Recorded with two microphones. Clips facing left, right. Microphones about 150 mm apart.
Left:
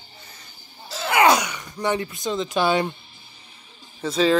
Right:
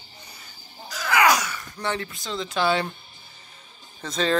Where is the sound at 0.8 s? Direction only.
25° left (ahead or behind).